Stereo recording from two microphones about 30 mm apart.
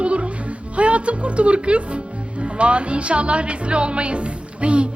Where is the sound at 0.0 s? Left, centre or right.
Right.